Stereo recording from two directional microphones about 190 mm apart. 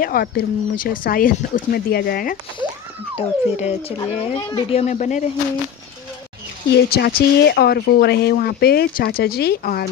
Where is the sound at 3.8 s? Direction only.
30° left (ahead or behind).